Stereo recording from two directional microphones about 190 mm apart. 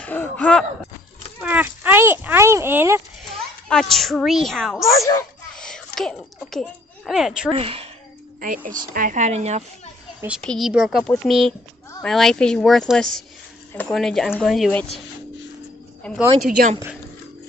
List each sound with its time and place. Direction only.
0.0 s a sound: 10° left (ahead or behind)
1.4 s speech: 10° right (ahead or behind)
3.6 s a woman's voice: centre (ahead or behind)
5.5 s a sound: 5° left (ahead or behind)
5.9 s speech: centre (ahead or behind)
7.5 s a woman's voice: 30° right (ahead or behind)
8.4 s a woman's voice: 45° right (ahead or behind)
10.4 s a woman's voice: centre (ahead or behind)
16.0 s speech: 5° left (ahead or behind)
16.4 s speech: 50° right (ahead or behind)